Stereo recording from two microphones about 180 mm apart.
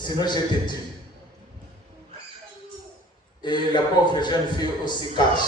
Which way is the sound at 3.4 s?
25° left (ahead or behind).